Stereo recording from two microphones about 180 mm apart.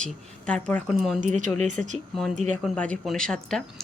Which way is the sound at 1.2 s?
45° right (ahead or behind).